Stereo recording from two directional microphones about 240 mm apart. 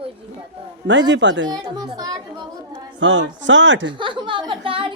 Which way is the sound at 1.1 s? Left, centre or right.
Right.